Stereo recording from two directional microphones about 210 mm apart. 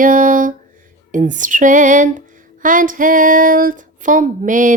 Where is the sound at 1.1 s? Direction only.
40° right (ahead or behind).